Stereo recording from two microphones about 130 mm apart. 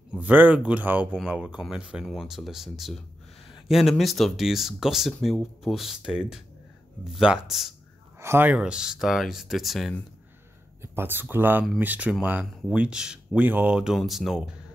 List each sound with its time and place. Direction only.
0.1 s speech: 15° right (ahead or behind)
8.2 s speech: 15° right (ahead or behind); by 9.9 s centre (ahead or behind)
10.8 s speech: 15° right (ahead or behind); by 14.4 s centre (ahead or behind)